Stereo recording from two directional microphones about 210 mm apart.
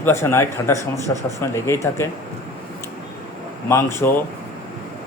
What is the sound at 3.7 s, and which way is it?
Speech, 15° left (ahead or behind).